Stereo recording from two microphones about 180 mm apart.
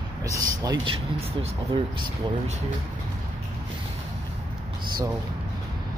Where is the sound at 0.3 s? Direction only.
20° right (ahead or behind).